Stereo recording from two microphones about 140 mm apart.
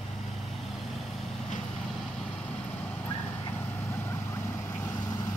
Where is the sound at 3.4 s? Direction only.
20° left (ahead or behind).